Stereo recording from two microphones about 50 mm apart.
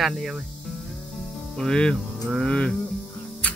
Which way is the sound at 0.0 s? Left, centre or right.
Centre.